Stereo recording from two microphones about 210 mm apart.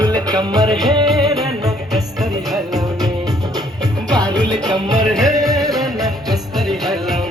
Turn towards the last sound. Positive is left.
turn(degrees=0)  # may be behind; listen again after turning